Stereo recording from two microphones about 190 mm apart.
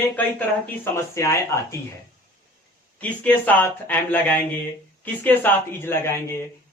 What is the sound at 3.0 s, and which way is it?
A man's voice, 10° left (ahead or behind).